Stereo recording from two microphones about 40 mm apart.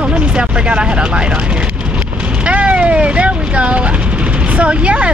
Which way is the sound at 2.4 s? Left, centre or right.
Right.